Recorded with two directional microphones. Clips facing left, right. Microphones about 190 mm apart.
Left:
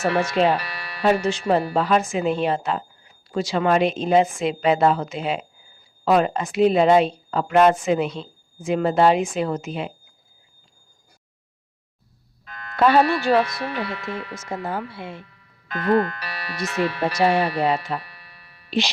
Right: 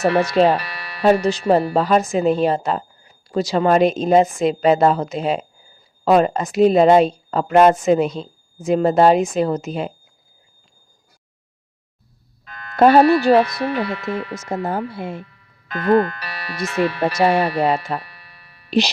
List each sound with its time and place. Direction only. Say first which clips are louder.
0.0 s a woman's voice: right 4 dB; 35° right (ahead or behind)
0.6 s music: right 1 dB; 75° right (ahead or behind)
1.0 s a woman's voice: right 4 dB; 40° right (ahead or behind)
12.7 s a woman's voice: right 6 dB; 40° right (ahead or behind)
15.7 s a woman's voice: right 4 dB; 60° right (ahead or behind); by 18.9 s 40° right (ahead or behind)